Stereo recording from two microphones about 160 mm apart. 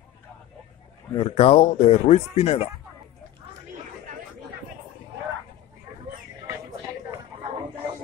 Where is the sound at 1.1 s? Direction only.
35° left (ahead or behind).